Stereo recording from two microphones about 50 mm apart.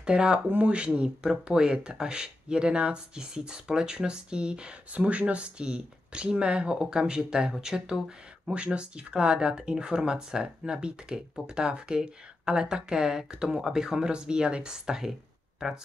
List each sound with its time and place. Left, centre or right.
0.0 s speech: centre